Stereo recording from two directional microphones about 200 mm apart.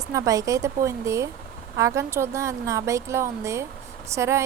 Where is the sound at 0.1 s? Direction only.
15° right (ahead or behind).